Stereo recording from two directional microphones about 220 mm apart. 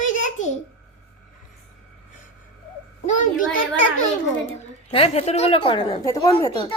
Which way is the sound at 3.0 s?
35° left (ahead or behind).